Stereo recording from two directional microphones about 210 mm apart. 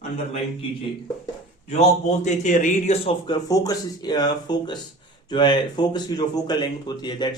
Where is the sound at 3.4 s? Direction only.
15° left (ahead or behind).